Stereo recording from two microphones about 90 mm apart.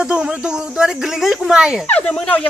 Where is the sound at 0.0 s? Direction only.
10° right (ahead or behind).